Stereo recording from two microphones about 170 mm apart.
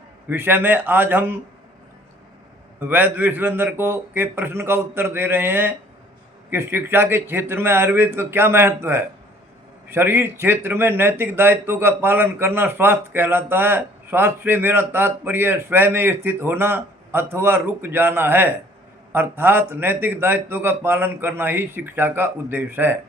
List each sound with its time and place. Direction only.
0.3 s speech: 10° right (ahead or behind)
2.8 s speech: 10° right (ahead or behind)